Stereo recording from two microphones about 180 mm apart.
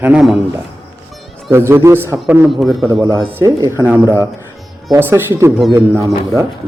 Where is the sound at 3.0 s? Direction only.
15° right (ahead or behind).